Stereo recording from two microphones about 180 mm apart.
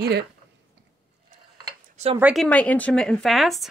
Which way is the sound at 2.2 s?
5° right (ahead or behind).